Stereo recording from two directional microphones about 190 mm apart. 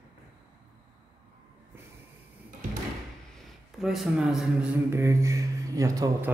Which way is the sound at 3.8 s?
Centre (ahead or behind).